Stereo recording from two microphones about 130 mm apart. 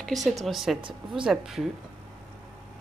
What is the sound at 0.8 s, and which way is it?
Speech, 40° right (ahead or behind).